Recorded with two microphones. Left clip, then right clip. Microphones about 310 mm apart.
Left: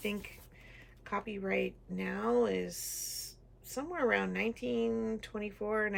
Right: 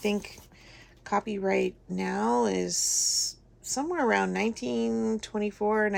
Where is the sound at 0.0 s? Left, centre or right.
Centre.